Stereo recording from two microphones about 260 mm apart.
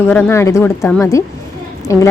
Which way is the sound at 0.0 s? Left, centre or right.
Centre.